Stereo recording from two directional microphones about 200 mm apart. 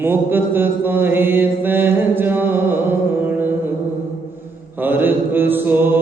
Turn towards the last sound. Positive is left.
turn(degrees=-10)  # may be behind; listen again after turning